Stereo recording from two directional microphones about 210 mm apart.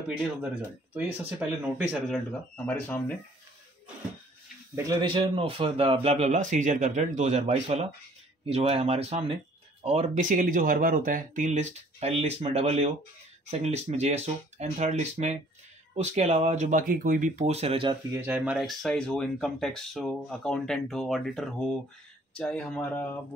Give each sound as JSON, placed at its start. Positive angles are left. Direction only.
{"t": 0.2, "sound": "speech", "side_deg": -10}
{"t": 4.7, "sound": "speech", "side_deg": -20}
{"t": 18.1, "sound": "speech", "side_deg": -10}